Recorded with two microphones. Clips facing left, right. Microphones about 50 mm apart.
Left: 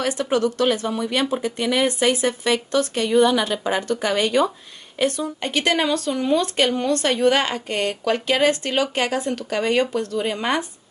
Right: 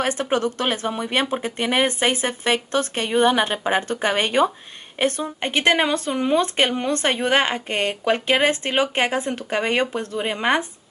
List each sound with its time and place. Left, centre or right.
0.0 s speech: right